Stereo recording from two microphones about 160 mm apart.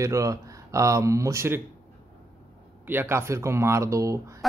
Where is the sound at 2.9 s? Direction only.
15° right (ahead or behind).